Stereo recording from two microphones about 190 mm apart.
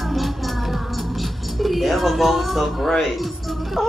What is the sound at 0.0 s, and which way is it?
Music, centre (ahead or behind).